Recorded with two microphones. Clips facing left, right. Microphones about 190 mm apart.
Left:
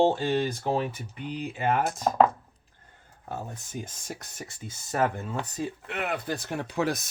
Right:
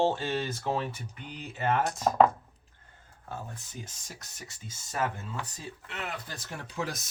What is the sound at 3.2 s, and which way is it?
Speech, 45° left (ahead or behind).